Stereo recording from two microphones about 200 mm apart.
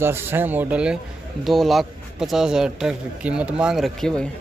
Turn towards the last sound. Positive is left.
turn(degrees=0)  # may be behind; listen again after turning